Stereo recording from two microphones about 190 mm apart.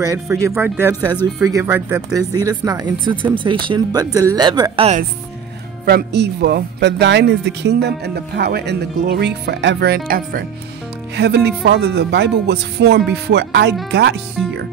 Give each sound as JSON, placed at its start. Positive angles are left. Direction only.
{"t": 0.0, "sound": "speech", "side_deg": -15}
{"t": 5.9, "sound": "speech", "side_deg": -60}
{"t": 11.1, "sound": "speech", "side_deg": -60}
{"t": 14.4, "sound": "speech", "side_deg": 0}